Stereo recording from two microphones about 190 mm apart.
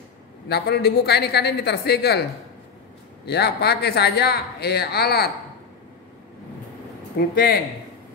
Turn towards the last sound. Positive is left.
turn(degrees=50)  # may be behind; listen again after turning